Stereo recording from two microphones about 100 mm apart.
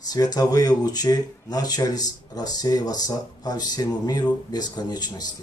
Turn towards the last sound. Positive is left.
turn(degrees=40)  # may be behind; listen again after turning